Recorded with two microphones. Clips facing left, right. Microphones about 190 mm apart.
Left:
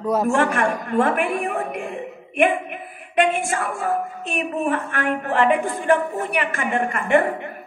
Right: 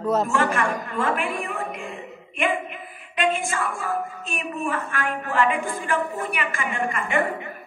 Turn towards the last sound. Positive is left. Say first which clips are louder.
# left 6 dB
turn(degrees=60)  # may be behind; listen again after turning